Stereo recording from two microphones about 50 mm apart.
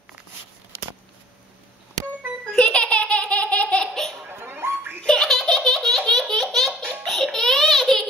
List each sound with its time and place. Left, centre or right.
2.5 s baby laughter: centre
3.6 s laughter: centre
4.3 s a sound: right
5.0 s laughter: centre
6.9 s baby laughter: centre